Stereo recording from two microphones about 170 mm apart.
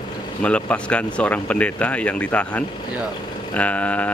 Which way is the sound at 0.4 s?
5° left (ahead or behind).